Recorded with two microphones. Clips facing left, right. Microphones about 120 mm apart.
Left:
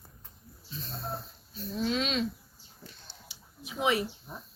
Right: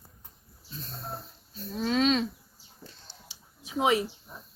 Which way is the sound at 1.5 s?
45° right (ahead or behind).